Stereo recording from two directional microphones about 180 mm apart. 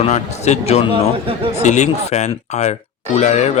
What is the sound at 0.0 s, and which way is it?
Speech, 40° left (ahead or behind).